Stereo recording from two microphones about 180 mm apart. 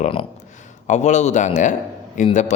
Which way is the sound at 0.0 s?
30° left (ahead or behind).